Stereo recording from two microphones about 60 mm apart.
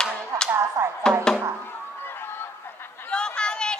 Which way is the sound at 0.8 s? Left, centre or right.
Right.